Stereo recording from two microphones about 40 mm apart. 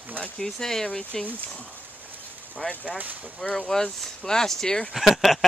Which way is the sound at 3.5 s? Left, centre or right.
Centre.